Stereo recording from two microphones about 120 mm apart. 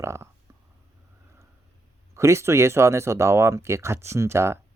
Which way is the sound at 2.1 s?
25° right (ahead or behind).